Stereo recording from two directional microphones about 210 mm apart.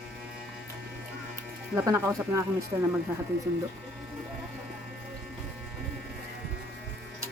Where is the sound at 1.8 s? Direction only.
15° right (ahead or behind).